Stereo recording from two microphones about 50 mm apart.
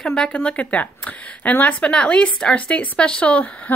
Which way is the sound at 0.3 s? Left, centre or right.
Left.